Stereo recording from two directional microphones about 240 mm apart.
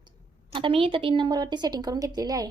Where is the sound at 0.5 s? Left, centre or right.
Right.